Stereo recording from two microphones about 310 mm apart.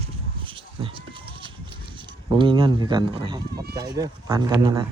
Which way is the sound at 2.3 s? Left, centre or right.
Centre.